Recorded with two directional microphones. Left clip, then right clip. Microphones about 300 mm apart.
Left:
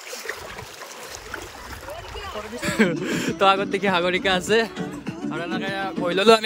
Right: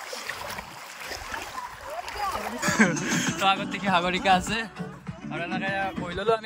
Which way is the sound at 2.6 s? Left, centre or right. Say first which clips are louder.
Left 1 dB; centre.